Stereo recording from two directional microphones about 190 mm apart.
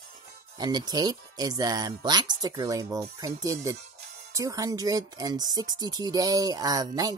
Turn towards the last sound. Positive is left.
turn(degrees=-20)  # may be behind; listen again after turning